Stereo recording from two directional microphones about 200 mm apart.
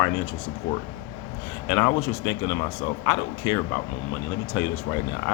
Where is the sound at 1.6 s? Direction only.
15° left (ahead or behind).